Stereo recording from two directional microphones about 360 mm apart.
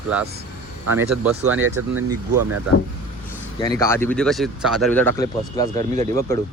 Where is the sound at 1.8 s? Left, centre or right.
Right.